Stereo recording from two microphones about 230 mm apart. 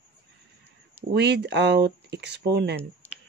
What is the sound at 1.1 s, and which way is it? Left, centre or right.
Speech, right.